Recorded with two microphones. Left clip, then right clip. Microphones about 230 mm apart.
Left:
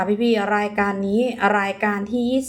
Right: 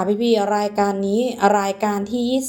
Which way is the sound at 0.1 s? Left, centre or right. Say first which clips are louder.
Right 4 dB; centre.